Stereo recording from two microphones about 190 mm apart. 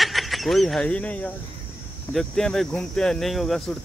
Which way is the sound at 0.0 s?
Centre (ahead or behind).